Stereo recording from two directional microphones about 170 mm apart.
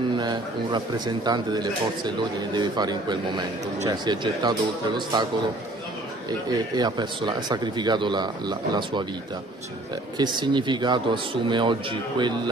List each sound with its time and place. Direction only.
0.2 s speech: 25° right (ahead or behind)
6.5 s speech: 25° right (ahead or behind)
10.1 s speech: 25° right (ahead or behind)